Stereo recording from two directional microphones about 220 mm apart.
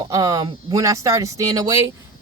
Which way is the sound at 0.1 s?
15° right (ahead or behind).